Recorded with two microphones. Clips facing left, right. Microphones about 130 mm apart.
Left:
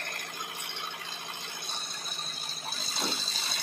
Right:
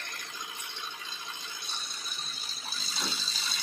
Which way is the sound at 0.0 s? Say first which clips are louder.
Left 3 dB; 55° left (ahead or behind).